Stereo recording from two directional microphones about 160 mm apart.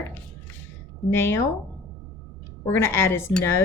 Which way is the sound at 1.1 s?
15° left (ahead or behind).